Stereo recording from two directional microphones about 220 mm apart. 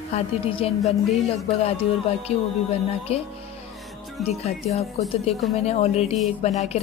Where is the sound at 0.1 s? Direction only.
25° left (ahead or behind).